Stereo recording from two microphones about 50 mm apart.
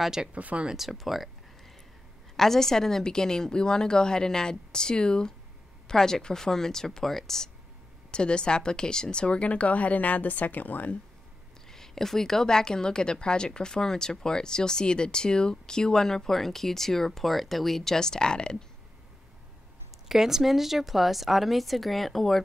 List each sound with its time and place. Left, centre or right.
0.0 s speech: centre
0.3 s speech: right
0.7 s a woman's voice: centre
2.3 s a woman's voice: centre
8.1 s speech: centre
11.7 s a woman's voice: centre
20.1 s a woman's voice: centre